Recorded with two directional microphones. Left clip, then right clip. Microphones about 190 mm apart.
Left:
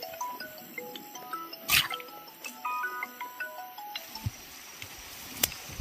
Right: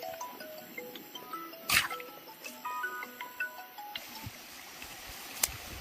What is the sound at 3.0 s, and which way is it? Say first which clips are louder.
Music: left 2 dB; 45° left (ahead or behind).